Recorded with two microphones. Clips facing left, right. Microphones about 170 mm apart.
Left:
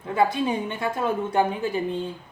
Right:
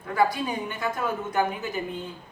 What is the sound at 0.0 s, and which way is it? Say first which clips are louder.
Speech: left 2 dB; 25° left (ahead or behind).